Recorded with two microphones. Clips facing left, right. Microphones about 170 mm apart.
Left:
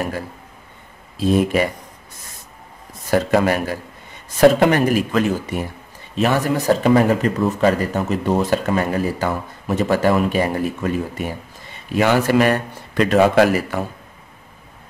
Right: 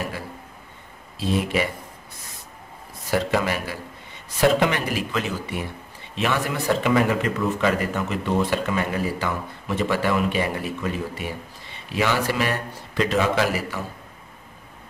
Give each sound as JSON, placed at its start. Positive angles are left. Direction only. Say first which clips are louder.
{"t": 1.1, "sound": "a man's voice", "louder": "left 6 dB", "side_deg": 50}
{"t": 3.1, "sound": "a man's voice", "louder": "left 6 dB", "side_deg": 45}